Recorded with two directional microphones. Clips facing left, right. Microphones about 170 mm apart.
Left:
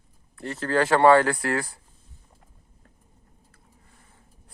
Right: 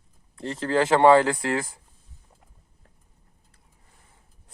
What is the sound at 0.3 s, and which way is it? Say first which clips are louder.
Speech: right 1 dB; 20° right (ahead or behind).